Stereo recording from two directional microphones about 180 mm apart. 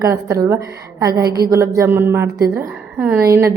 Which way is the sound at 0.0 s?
20° right (ahead or behind).